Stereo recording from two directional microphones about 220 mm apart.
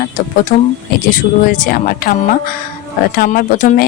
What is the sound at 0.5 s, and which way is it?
Speech, 35° left (ahead or behind).